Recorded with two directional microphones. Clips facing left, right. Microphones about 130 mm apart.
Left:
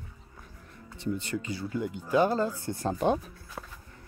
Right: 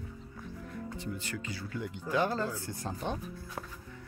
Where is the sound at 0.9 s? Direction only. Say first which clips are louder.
Left 10 dB; 25° left (ahead or behind).